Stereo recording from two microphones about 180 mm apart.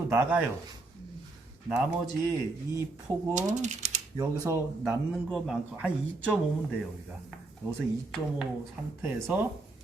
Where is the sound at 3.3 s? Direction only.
40° right (ahead or behind).